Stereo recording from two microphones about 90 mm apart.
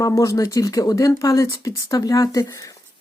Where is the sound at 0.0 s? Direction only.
40° left (ahead or behind).